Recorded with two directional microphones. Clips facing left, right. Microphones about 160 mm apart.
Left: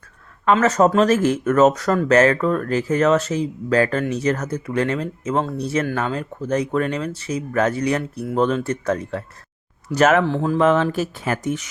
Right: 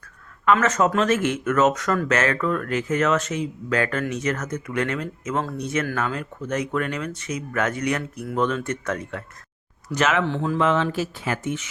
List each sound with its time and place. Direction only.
0.4 s speech: 35° left (ahead or behind)
9.9 s speech: 45° left (ahead or behind)